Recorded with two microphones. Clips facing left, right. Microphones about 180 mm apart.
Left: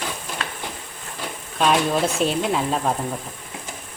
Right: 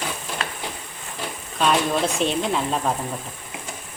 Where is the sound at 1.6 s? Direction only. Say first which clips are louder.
Left 1 dB; centre (ahead or behind).